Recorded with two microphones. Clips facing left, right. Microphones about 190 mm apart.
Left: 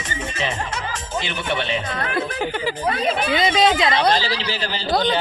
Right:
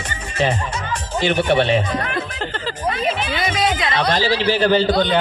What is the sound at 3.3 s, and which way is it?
Speech, 25° left (ahead or behind).